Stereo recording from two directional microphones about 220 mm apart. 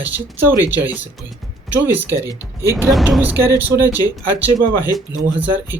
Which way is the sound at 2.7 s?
5° right (ahead or behind).